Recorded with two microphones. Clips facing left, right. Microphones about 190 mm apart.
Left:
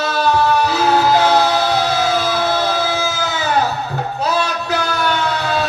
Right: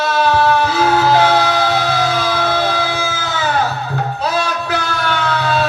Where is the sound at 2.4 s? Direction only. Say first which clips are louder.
Right 1 dB; 55° right (ahead or behind).